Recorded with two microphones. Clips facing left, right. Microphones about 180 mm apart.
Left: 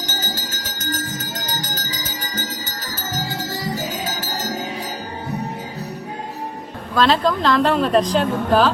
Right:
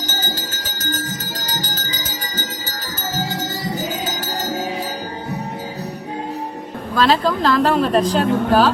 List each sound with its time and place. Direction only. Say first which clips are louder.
6.9 s speech: even; 5° right (ahead or behind)